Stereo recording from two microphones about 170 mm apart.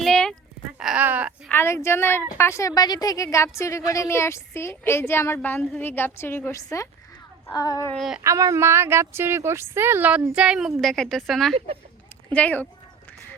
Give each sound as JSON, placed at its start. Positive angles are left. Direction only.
{"t": 0.0, "sound": "sheep", "side_deg": 5}
{"t": 0.8, "sound": "a sound", "side_deg": -5}
{"t": 1.5, "sound": "a woman's voice", "side_deg": 15}
{"t": 7.9, "sound": "speech", "side_deg": 0}
{"t": 8.2, "sound": "a woman's voice", "side_deg": -20}